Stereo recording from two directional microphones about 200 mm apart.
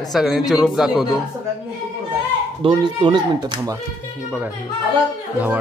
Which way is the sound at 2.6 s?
25° right (ahead or behind).